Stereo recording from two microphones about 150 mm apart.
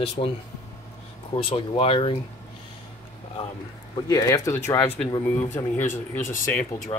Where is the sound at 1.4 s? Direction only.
40° left (ahead or behind).